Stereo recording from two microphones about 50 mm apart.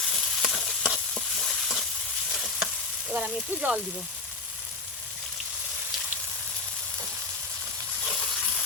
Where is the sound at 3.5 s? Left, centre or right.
Right.